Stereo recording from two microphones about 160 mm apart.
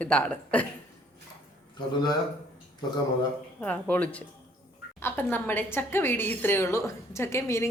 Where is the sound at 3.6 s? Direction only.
10° left (ahead or behind).